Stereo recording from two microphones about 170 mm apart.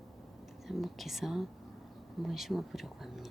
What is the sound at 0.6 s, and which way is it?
Speech, centre (ahead or behind).